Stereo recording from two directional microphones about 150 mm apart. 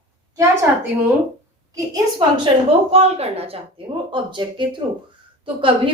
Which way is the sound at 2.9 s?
45° right (ahead or behind).